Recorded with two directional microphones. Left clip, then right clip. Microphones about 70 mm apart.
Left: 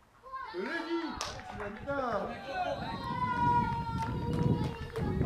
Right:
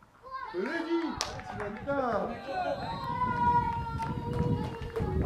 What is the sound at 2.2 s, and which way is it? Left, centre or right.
Speech, centre.